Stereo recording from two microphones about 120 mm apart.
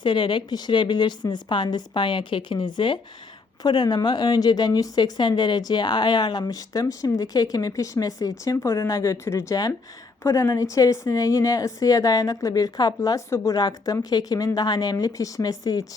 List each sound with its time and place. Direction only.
0.0 s a woman's voice: 40° left (ahead or behind)